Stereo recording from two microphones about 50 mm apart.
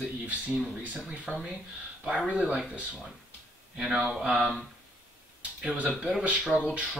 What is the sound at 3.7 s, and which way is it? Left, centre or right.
Speech, centre.